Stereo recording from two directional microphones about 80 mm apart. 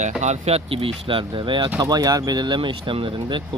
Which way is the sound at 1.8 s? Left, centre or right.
Right.